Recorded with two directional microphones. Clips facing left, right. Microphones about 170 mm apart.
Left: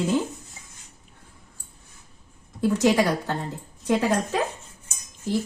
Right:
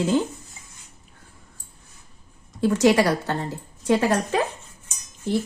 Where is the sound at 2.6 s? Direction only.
85° right.